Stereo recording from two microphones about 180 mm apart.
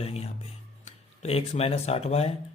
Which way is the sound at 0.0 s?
35° left (ahead or behind).